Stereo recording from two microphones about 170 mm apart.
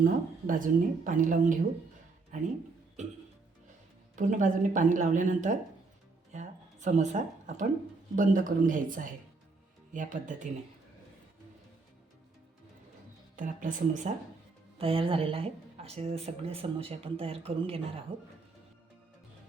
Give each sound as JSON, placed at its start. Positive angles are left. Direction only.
{"t": 0.0, "sound": "speech", "side_deg": -55}
{"t": 4.1, "sound": "speech", "side_deg": -50}
{"t": 13.3, "sound": "speech", "side_deg": -50}
{"t": 14.8, "sound": "speech", "side_deg": -35}